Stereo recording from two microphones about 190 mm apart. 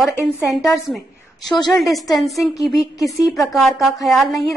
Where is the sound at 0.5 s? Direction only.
Centre (ahead or behind).